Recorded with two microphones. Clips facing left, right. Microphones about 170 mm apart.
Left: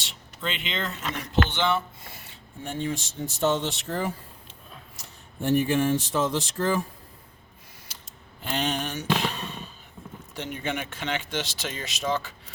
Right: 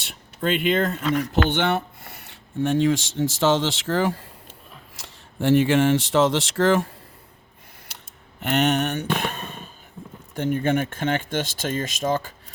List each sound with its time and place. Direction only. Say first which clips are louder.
0.0 s speech: right 7 dB; 55° right (ahead or behind); by 6.9 s 80° right
8.4 s a sound: right 7 dB; 70° right (ahead or behind); by 9.6 s 50° right (ahead or behind)
10.3 s speech: right 10 dB; 50° right (ahead or behind)